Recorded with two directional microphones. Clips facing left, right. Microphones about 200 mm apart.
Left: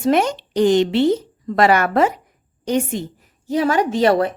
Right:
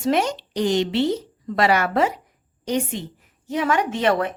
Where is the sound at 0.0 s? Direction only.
55° left (ahead or behind).